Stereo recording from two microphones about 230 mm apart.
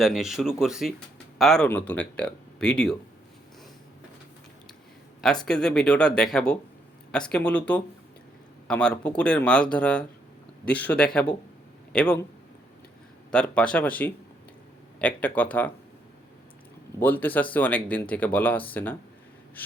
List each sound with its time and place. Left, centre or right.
0.0 s speech: centre
5.5 s speech: centre
13.3 s speech: centre
17.0 s speech: centre